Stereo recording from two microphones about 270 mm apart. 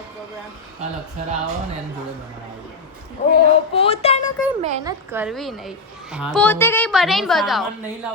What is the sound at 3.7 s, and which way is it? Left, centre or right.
Speech, left.